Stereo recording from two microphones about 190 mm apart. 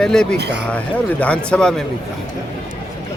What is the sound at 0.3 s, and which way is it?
Speech, 60° right (ahead or behind).